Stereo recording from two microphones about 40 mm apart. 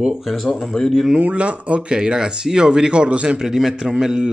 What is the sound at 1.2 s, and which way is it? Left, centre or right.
Speech, right.